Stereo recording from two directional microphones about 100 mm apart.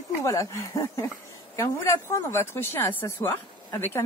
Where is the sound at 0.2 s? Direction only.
30° left (ahead or behind).